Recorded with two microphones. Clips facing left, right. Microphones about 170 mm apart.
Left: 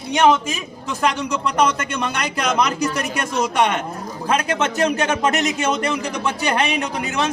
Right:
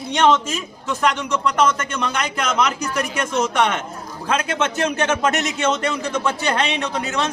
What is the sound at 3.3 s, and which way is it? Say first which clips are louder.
Speech: even; 10° left (ahead or behind).